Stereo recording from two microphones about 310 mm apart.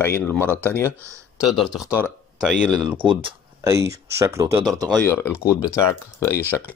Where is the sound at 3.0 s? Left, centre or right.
Centre.